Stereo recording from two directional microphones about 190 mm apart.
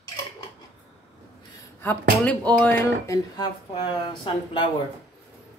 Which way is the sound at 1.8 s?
10° left (ahead or behind).